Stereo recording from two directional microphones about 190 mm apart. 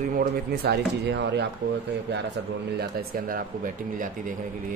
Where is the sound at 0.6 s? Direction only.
60° right (ahead or behind).